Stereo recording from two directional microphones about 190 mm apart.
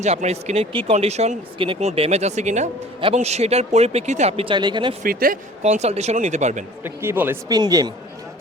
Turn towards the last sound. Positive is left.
turn(degrees=-20)  # may be behind; listen again after turning